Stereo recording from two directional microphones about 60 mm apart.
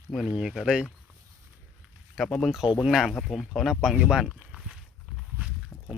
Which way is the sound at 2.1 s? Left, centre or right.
Centre.